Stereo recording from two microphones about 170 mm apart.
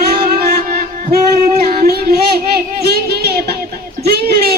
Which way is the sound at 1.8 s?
60° right (ahead or behind).